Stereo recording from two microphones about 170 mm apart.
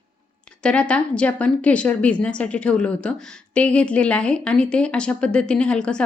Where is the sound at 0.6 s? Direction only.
5° left (ahead or behind).